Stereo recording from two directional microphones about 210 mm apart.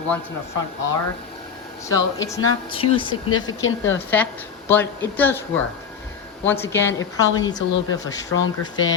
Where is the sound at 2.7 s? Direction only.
25° left (ahead or behind).